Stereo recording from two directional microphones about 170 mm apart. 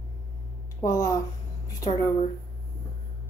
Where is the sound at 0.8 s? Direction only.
20° left (ahead or behind).